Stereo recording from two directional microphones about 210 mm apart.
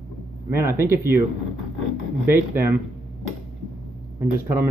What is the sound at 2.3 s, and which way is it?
Speech, 10° right (ahead or behind).